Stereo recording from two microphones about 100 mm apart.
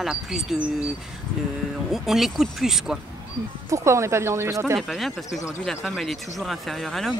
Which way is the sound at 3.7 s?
30° right (ahead or behind).